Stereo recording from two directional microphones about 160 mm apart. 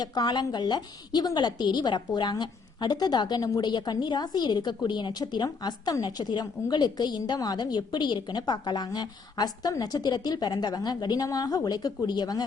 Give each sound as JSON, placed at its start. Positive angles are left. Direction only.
{"t": 0.0, "sound": "a woman's voice", "side_deg": 25}